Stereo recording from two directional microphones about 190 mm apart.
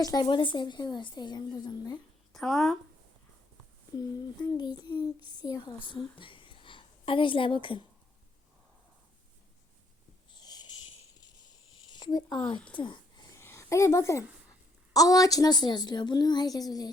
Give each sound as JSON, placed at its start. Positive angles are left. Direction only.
{"t": 0.0, "sound": "a woman's voice", "side_deg": 20}
{"t": 2.3, "sound": "speech", "side_deg": 0}
{"t": 4.4, "sound": "a woman's voice", "side_deg": 20}
{"t": 10.3, "sound": "a sound", "side_deg": 20}
{"t": 14.9, "sound": "a woman's voice", "side_deg": 20}